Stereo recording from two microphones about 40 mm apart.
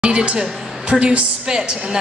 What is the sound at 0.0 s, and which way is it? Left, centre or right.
Music, right.